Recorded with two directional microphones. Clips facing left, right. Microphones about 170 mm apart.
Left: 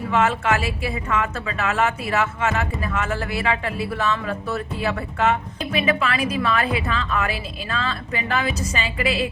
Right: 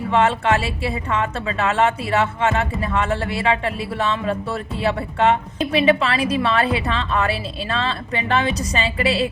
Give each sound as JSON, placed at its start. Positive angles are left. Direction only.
{"t": 0.1, "sound": "speech", "side_deg": -30}